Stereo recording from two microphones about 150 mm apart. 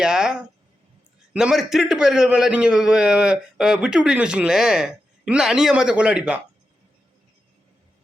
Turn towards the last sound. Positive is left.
turn(degrees=-5)  # may be behind; listen again after turning